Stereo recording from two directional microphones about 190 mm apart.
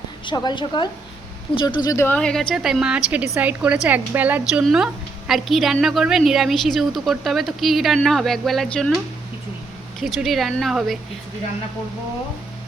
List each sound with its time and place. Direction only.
0.3 s a woman's voice: 25° left (ahead or behind); by 8.9 s centre (ahead or behind)
10.0 s a woman's voice: centre (ahead or behind)